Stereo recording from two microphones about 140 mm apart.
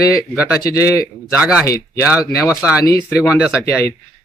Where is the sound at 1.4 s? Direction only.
10° right (ahead or behind).